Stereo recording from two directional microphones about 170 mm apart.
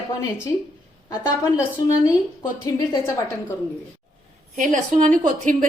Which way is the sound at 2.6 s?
15° left (ahead or behind).